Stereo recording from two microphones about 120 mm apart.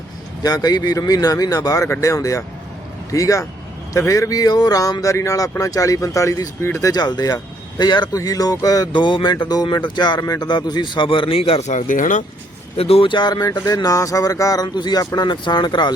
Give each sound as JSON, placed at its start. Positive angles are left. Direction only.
{"t": 0.4, "sound": "speech", "side_deg": 30}
{"t": 6.8, "sound": "speech", "side_deg": 35}
{"t": 8.9, "sound": "speech", "side_deg": 40}
{"t": 11.7, "sound": "speech", "side_deg": 90}
{"t": 12.7, "sound": "speech", "side_deg": 55}